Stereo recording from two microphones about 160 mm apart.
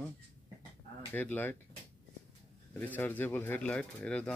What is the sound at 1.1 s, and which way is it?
Speech, 10° left (ahead or behind).